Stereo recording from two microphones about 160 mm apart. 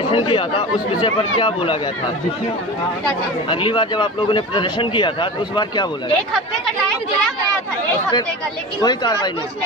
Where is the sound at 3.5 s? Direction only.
30° left (ahead or behind).